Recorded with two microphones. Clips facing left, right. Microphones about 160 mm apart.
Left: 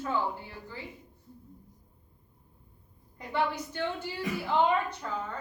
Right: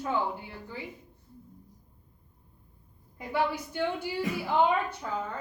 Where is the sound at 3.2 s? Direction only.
10° right (ahead or behind).